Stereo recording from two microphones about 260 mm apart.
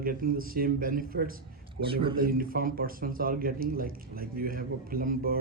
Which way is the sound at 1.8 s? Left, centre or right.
Right.